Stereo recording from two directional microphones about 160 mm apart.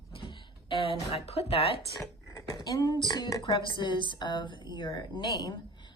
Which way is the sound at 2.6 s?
25° left (ahead or behind).